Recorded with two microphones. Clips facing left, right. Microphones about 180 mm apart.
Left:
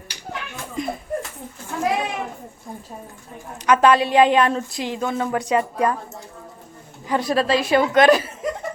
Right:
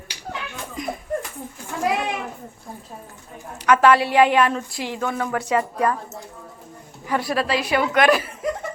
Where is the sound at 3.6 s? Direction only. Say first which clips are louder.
Even; 20° left (ahead or behind).